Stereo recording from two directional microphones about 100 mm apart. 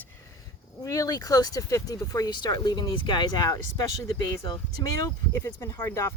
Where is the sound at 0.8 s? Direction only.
35° left (ahead or behind).